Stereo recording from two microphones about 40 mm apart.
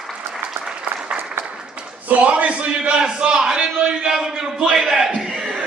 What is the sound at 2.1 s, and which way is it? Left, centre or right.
Speech, right.